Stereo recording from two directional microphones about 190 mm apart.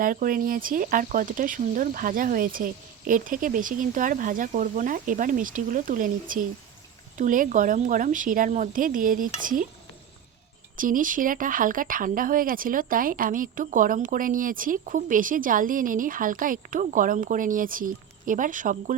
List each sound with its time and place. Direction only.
0.0 s speech: 45° right (ahead or behind)
10.8 s speech: 45° right (ahead or behind)